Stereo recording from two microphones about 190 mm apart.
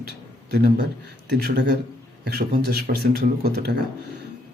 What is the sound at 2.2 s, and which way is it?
A man's voice, 55° right (ahead or behind).